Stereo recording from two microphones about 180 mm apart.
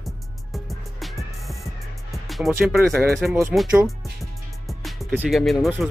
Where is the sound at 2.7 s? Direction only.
Centre (ahead or behind).